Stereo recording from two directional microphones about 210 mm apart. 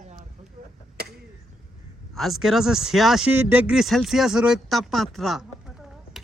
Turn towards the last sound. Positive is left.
turn(degrees=0)  # may be behind; listen again after turning